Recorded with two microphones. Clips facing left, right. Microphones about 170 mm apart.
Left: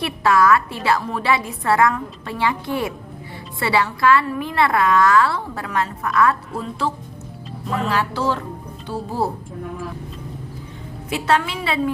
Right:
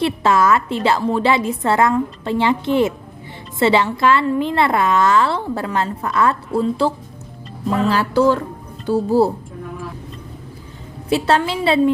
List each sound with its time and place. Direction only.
0.0 s a woman's voice: 25° right (ahead or behind)
11.1 s a woman's voice: 30° right (ahead or behind)